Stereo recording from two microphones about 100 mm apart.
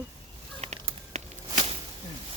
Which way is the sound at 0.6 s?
90° right.